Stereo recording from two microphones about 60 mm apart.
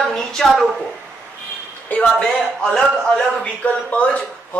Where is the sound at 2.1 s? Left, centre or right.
Centre.